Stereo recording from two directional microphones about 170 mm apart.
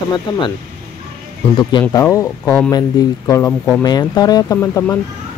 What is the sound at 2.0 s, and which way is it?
Speech, 15° left (ahead or behind).